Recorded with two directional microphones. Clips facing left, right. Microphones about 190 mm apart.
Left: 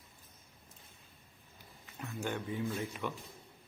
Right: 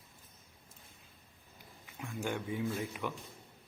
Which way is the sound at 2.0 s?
10° right (ahead or behind).